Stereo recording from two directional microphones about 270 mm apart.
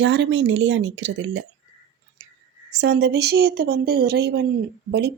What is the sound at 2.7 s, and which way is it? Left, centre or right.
Speech, right.